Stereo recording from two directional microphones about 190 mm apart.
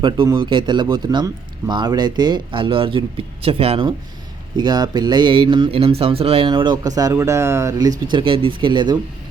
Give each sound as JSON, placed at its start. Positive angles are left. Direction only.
{"t": 0.0, "sound": "speech", "side_deg": -25}
{"t": 8.1, "sound": "speech", "side_deg": -30}